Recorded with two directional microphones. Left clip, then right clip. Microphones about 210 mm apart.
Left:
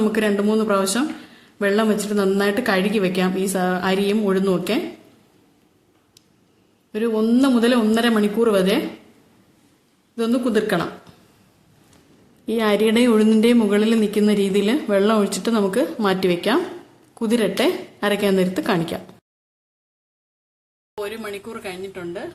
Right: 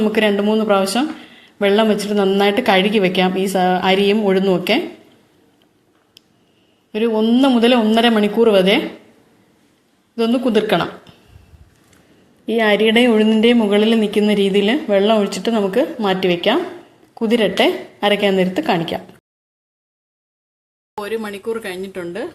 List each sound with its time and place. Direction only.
0.0 s speech: centre (ahead or behind)
6.9 s speech: centre (ahead or behind)
10.2 s speech: 5° right (ahead or behind)
12.5 s speech: centre (ahead or behind)
21.0 s speech: 35° right (ahead or behind)